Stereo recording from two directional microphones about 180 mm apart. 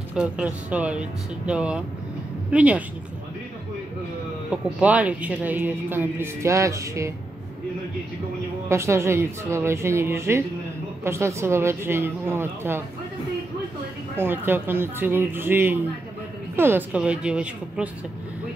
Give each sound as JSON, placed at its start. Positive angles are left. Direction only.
{"t": 0.1, "sound": "speech", "side_deg": -5}
{"t": 4.5, "sound": "speech", "side_deg": -5}
{"t": 8.6, "sound": "speech", "side_deg": -15}
{"t": 14.1, "sound": "speech", "side_deg": -10}